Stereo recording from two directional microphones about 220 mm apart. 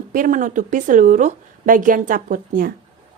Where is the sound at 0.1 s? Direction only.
35° right (ahead or behind).